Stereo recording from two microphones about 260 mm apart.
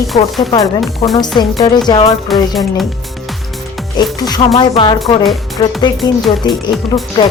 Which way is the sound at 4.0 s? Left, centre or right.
Centre.